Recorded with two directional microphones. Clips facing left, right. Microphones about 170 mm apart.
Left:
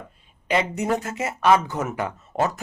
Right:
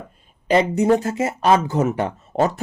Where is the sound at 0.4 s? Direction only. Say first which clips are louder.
Right 7 dB; 35° right (ahead or behind).